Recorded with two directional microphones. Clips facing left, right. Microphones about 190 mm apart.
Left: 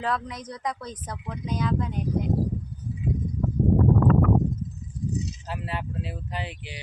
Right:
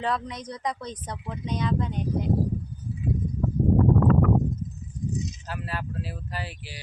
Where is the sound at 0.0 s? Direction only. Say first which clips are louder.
Even; centre (ahead or behind).